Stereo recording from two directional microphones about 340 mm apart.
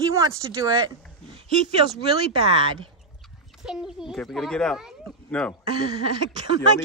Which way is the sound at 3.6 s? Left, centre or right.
Centre.